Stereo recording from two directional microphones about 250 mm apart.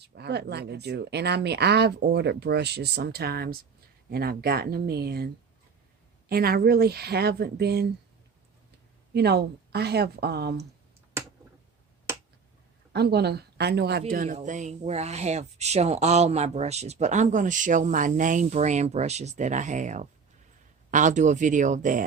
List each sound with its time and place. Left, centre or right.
0.0 s speech: right
9.1 s speech: right
12.9 s speech: right